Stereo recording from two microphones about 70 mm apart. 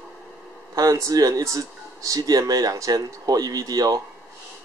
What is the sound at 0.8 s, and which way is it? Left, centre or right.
Speech, right.